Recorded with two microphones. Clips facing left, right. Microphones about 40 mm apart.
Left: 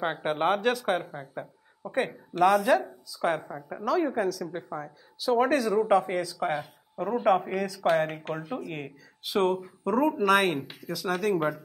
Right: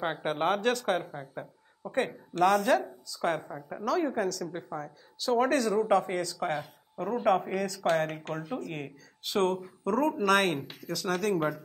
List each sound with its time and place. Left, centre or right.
0.0 s speech: centre